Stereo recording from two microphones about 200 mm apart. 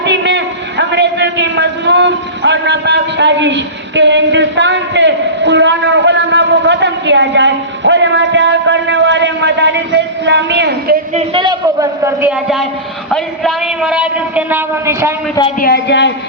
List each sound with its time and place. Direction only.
0.0 s a man's voice: 60° right (ahead or behind)
11.1 s a man's voice: 25° right (ahead or behind)
13.1 s a man's voice: centre (ahead or behind)
15.6 s a woman's voice: 55° left (ahead or behind)